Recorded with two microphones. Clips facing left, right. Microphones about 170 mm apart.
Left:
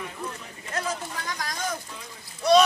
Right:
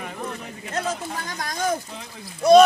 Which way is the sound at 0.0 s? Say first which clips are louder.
Right 3 dB; 60° right (ahead or behind).